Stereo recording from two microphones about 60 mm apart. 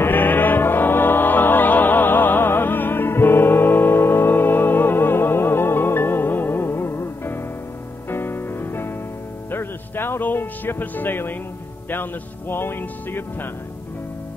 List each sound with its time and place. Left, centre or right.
0.0 s music: left
11.9 s a man's voice: left